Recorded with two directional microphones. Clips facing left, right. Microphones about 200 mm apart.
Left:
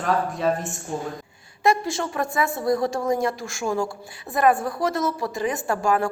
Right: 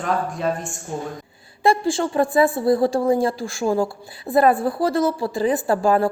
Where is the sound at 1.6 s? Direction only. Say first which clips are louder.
Right 3 dB; 30° right (ahead or behind).